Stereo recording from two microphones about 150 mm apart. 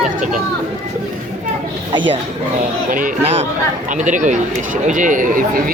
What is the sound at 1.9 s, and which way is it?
Speech, 35° right (ahead or behind).